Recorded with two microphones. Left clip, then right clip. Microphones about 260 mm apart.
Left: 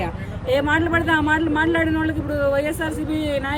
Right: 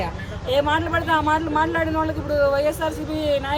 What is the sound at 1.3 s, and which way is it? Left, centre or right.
Speech, centre.